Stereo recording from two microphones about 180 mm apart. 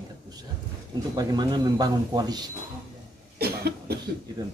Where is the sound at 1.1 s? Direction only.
25° right (ahead or behind).